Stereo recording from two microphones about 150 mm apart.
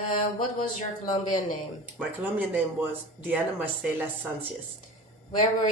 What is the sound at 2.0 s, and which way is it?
Speech, 10° right (ahead or behind).